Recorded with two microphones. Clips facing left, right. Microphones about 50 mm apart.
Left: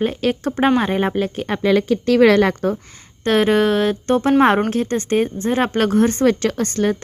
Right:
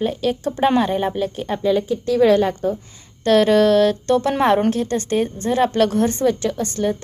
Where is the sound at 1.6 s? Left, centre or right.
Left.